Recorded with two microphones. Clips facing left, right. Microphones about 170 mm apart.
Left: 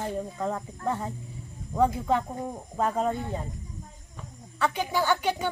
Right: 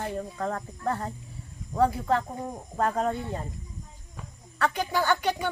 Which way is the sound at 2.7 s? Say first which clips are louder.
Even; 5° left (ahead or behind).